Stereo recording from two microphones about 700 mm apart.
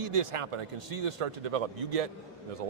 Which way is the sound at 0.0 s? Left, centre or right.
Right.